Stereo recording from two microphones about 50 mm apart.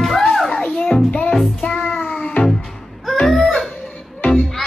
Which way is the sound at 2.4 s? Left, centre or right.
Left.